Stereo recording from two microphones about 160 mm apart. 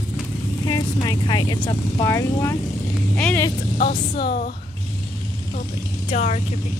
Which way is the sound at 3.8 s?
65° left (ahead or behind).